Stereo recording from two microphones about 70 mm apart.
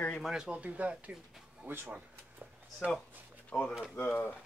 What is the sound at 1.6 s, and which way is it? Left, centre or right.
Speech, right.